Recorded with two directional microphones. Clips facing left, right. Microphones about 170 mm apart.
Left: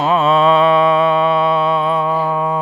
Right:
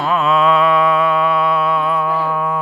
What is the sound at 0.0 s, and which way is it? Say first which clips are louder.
Music: left 2 dB; 25° left (ahead or behind).